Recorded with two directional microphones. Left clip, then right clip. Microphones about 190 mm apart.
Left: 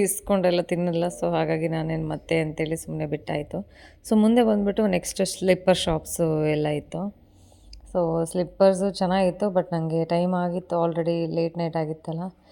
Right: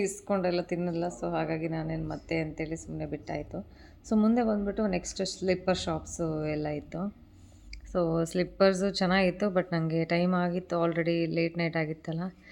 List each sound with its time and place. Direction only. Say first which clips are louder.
0.0 s a woman's voice: left 7 dB; 50° left (ahead or behind)
7.9 s a woman's voice: left 5 dB; 10° left (ahead or behind)